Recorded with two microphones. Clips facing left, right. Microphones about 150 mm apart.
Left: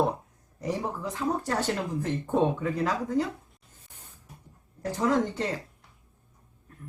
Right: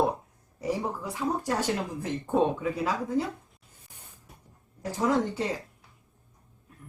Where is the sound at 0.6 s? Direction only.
10° right (ahead or behind).